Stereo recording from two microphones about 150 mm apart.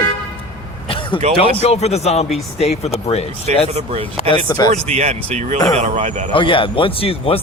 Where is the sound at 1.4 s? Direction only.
45° left (ahead or behind).